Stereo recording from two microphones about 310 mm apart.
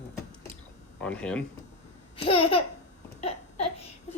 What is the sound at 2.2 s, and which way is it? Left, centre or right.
Speech, centre.